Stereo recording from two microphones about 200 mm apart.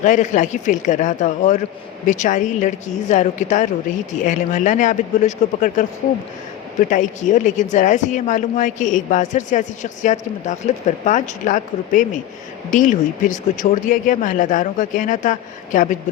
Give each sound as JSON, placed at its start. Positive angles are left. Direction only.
{"t": 0.0, "sound": "a woman's voice", "side_deg": 40}
{"t": 6.9, "sound": "a woman's voice", "side_deg": 40}